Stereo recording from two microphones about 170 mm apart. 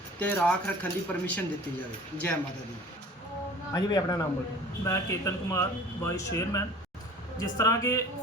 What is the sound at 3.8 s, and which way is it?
Speech, 25° left (ahead or behind).